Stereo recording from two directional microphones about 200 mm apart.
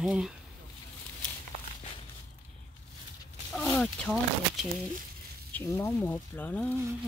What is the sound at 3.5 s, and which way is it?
Speech, 5° left (ahead or behind).